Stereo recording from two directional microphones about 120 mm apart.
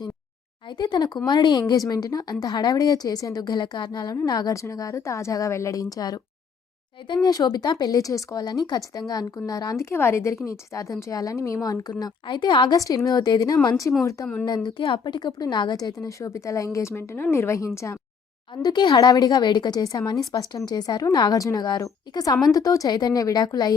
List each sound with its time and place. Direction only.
0.8 s a woman's voice: 35° left (ahead or behind)
14.4 s a woman's voice: 35° left (ahead or behind)
18.5 s speech: 35° left (ahead or behind)